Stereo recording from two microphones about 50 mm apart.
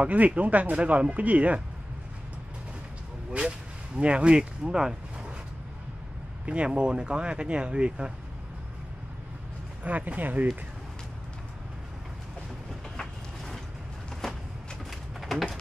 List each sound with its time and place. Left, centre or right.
0.0 s speech: right
3.3 s speech: right
6.4 s speech: right
9.8 s speech: right
12.9 s a sound: centre
14.9 s pigeon: centre